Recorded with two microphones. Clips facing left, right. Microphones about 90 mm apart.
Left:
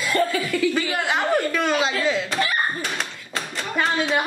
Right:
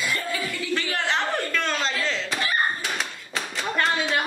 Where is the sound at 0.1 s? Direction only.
50° left (ahead or behind).